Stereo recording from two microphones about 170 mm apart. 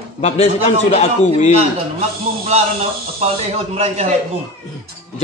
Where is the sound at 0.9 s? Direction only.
45° left (ahead or behind).